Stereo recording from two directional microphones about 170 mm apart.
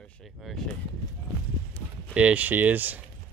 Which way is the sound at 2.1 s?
10° right (ahead or behind).